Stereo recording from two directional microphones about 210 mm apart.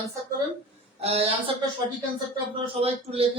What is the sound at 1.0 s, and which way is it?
Speech, 30° right (ahead or behind).